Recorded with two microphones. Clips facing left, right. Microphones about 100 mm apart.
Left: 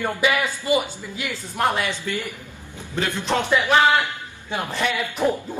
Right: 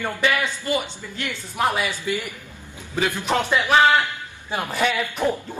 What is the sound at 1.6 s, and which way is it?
A man's voice, 5° right (ahead or behind).